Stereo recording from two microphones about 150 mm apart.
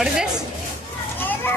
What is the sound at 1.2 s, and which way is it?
Children playing, 15° left (ahead or behind).